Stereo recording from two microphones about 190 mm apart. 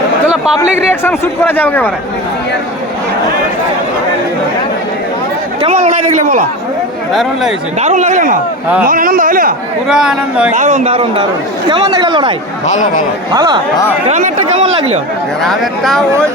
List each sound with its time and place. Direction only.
0.9 s speech: 10° left (ahead or behind)
5.6 s a man's voice: 35° right (ahead or behind)
7.1 s speech: centre (ahead or behind)
7.8 s a man's voice: 35° right (ahead or behind)
9.9 s speech: 5° right (ahead or behind)
10.5 s a man's voice: 40° right (ahead or behind); by 12.3 s 25° right (ahead or behind)
12.6 s speech: 40° left (ahead or behind)
13.3 s speech: 20° right (ahead or behind)
14.1 s a man's voice: 40° right (ahead or behind)
15.4 s speech: centre (ahead or behind)